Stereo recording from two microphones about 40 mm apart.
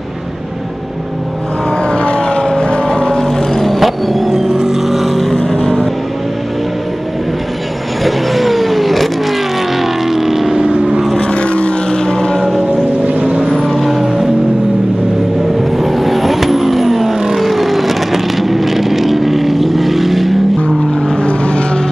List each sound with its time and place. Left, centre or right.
1.8 s vehicle: left
3.2 s music: centre
4.5 s vehicle: centre
8.0 s vehicle: centre
11.1 s vehicle: left
12.4 s a sound: centre
13.2 s vehicle: right
13.5 s vehicle: centre
15.7 s vehicle: centre
21.2 s vehicle: left